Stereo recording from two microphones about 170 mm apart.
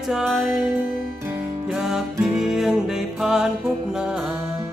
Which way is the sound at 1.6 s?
5° right (ahead or behind).